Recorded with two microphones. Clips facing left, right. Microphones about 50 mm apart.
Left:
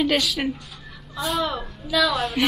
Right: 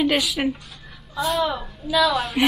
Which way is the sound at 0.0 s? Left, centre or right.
Centre.